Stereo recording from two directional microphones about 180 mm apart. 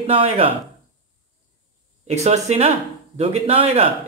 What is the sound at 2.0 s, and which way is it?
Speech, 35° right (ahead or behind).